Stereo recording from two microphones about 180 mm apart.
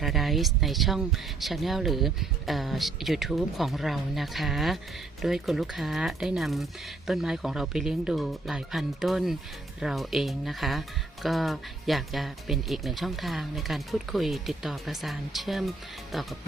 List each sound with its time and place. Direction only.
0.0 s speech: centre (ahead or behind)